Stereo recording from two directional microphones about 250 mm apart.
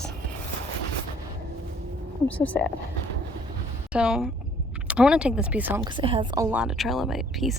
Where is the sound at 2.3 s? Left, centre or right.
Centre.